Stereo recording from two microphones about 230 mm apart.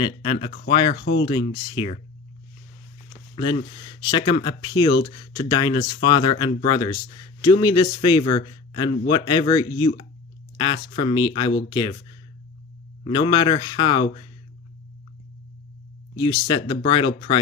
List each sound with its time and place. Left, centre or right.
0.0 s speech: left
3.8 s speech: centre
13.1 s speech: centre
16.1 s speech: centre